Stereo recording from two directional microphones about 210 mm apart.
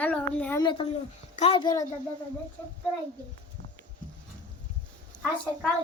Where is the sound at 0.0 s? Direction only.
5° left (ahead or behind).